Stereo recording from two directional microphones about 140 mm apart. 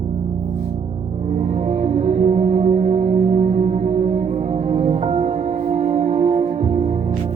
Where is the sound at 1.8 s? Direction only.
55° right (ahead or behind).